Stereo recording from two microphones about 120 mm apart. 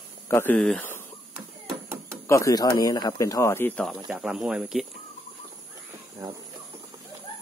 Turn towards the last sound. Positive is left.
turn(degrees=-25)  # may be behind; listen again after turning